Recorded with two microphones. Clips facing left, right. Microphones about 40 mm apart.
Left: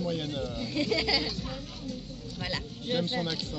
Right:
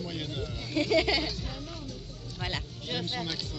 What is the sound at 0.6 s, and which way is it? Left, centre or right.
Speech, right.